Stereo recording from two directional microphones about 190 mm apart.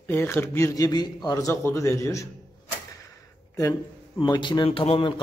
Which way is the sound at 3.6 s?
20° left (ahead or behind).